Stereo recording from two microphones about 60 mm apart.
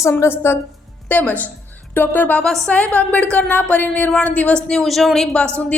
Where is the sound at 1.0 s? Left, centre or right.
Left.